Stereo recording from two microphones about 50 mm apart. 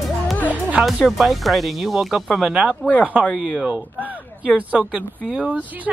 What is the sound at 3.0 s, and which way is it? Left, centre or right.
Speech, right.